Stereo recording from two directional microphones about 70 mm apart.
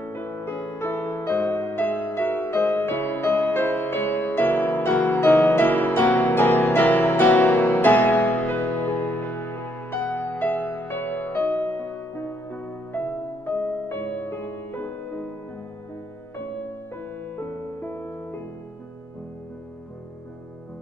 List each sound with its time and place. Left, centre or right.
0.0 s music: left
17.4 s music: left